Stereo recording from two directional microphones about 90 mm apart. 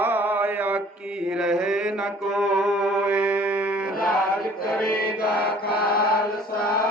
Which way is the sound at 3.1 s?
15° right (ahead or behind).